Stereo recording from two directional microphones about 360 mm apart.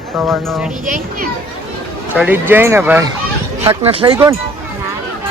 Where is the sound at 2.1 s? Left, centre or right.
Centre.